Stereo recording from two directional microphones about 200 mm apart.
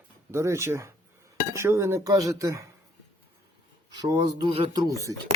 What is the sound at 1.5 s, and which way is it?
Speech, 15° right (ahead or behind).